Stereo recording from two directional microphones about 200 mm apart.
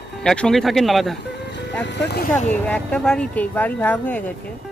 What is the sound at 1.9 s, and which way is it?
Speech, 55° left (ahead or behind).